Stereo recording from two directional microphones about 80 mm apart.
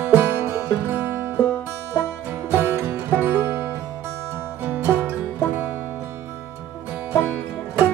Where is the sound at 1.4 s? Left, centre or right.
Left.